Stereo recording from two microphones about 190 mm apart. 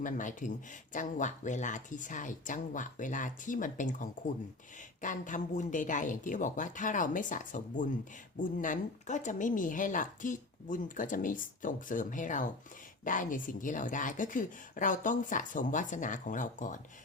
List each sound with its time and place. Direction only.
0.0 s speech: 40° left (ahead or behind)